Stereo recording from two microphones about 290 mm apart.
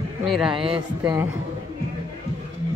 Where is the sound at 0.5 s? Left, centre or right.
Centre.